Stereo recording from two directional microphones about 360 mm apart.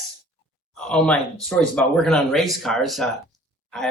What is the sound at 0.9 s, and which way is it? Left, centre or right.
Speech, centre.